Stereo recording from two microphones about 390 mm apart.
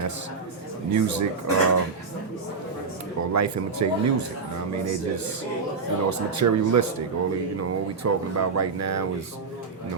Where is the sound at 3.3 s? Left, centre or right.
Right.